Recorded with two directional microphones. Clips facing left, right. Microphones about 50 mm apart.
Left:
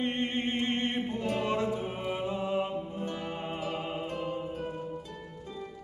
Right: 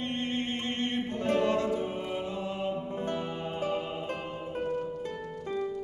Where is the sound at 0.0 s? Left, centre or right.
Centre.